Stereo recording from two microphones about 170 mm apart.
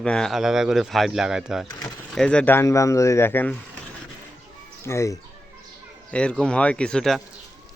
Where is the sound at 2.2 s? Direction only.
5° left (ahead or behind).